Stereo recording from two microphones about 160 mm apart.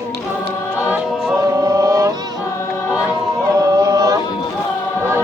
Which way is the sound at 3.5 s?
20° right (ahead or behind).